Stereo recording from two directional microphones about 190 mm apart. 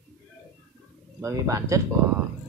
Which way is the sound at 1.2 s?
15° right (ahead or behind).